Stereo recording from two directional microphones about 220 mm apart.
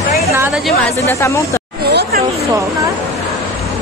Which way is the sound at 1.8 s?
45° right (ahead or behind).